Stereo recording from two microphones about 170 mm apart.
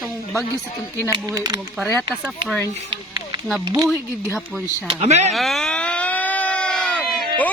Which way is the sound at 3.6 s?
25° right (ahead or behind).